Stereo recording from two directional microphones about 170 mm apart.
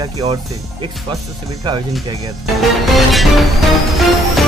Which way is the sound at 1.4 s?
25° right (ahead or behind).